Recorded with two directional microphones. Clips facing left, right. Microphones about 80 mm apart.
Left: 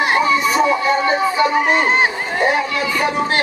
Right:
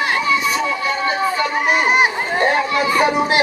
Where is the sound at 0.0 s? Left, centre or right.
Left.